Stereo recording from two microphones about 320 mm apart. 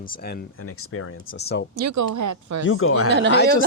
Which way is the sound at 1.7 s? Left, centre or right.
Right.